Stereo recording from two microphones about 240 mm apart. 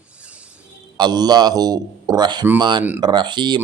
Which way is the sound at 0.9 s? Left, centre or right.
Centre.